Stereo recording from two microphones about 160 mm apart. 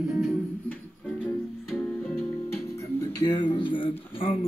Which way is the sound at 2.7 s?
25° left (ahead or behind).